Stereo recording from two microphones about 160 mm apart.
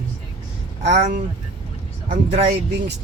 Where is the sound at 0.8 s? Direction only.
45° right (ahead or behind).